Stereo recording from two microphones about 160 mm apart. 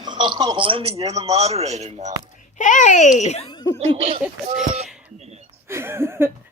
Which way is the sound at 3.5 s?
25° left (ahead or behind).